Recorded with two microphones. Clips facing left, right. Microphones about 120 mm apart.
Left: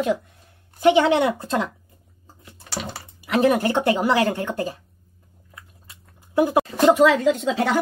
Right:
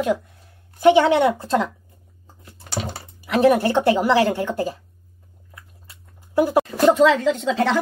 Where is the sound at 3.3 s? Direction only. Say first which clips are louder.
Right 2 dB; 15° left (ahead or behind).